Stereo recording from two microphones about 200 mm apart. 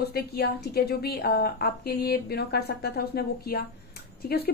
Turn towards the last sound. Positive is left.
turn(degrees=50)  # may be behind; listen again after turning